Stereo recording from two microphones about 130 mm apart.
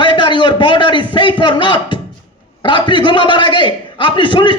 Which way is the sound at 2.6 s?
40° left (ahead or behind).